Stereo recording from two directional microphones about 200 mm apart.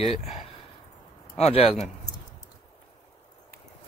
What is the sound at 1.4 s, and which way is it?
Speech, 30° left (ahead or behind).